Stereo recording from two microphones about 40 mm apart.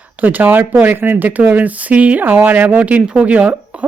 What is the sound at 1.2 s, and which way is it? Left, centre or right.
Speech, right.